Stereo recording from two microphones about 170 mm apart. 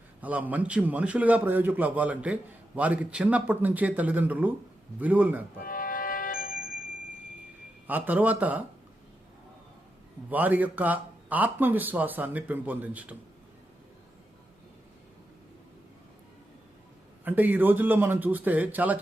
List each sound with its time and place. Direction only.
0.2 s a man's voice: 10° right (ahead or behind)
5.6 s music: 55° left (ahead or behind)
7.9 s a man's voice: 10° right (ahead or behind)
10.2 s a man's voice: 10° right (ahead or behind)
17.2 s a man's voice: 10° right (ahead or behind)